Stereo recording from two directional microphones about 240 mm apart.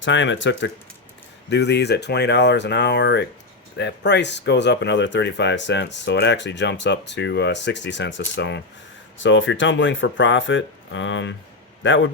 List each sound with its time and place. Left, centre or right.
0.0 s speech: left